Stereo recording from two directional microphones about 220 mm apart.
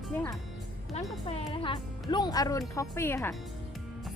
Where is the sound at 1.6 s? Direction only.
20° left (ahead or behind).